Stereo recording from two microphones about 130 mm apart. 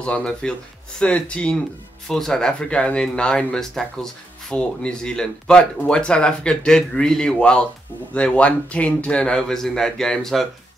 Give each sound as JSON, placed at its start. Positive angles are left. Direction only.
{"t": 0.0, "sound": "speech", "side_deg": 5}